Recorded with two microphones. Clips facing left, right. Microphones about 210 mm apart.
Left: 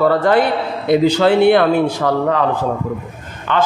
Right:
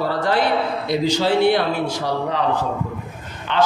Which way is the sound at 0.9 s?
60° left (ahead or behind).